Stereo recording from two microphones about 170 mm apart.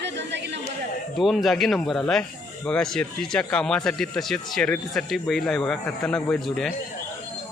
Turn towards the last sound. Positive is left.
turn(degrees=5)  # may be behind; listen again after turning